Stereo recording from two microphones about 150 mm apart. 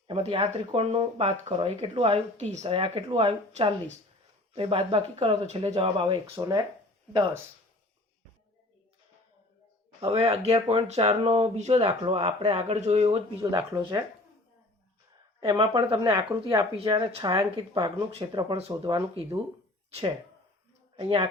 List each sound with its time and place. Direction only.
0.1 s speech: 40° right (ahead or behind)
2.6 s speech: 35° right (ahead or behind)
3.5 s speech: 50° right (ahead or behind)
4.5 s speech: 35° right (ahead or behind)
6.3 s speech: 20° right (ahead or behind)
10.0 s speech: 45° right (ahead or behind); by 14.0 s 25° right (ahead or behind)
15.4 s speech: 35° right (ahead or behind)
19.9 s a woman's voice: 40° right (ahead or behind)